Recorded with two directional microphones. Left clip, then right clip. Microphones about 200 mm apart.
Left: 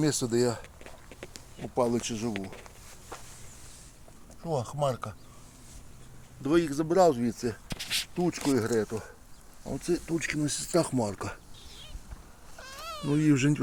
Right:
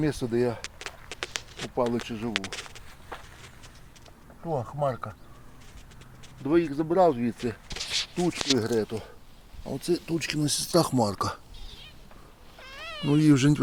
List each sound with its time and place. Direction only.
0.0 s speech: 10° left (ahead or behind)
0.6 s a sound: 5° right (ahead or behind)
1.7 s speech: 10° left (ahead or behind)
2.3 s speech: 5° right (ahead or behind)
4.4 s speech: centre (ahead or behind)
6.4 s speech: 5° left (ahead or behind); by 11.3 s 25° right (ahead or behind)
12.5 s cat: 10° right (ahead or behind)